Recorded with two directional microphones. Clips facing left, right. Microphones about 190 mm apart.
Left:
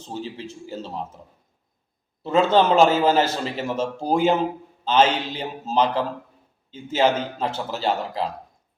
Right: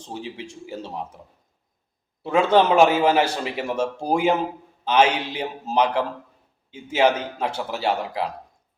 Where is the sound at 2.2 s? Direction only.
10° right (ahead or behind).